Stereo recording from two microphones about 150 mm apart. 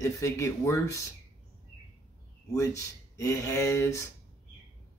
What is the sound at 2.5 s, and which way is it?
Speech, 20° left (ahead or behind).